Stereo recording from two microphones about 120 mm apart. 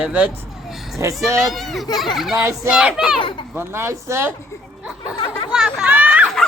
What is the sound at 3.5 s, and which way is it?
Speech, 20° right (ahead or behind).